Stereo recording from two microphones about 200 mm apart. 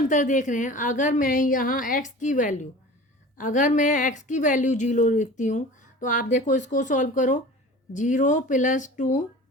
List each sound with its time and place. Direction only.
0.1 s speech: 40° left (ahead or behind)